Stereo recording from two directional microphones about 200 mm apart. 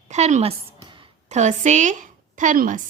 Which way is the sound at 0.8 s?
25° right (ahead or behind).